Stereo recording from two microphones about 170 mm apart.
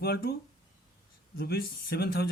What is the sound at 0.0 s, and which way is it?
Speech, 65° left (ahead or behind).